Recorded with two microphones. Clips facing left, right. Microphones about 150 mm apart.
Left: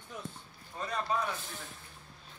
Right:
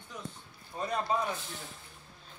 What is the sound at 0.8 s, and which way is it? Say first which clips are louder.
Speech: right 2 dB; 30° right (ahead or behind).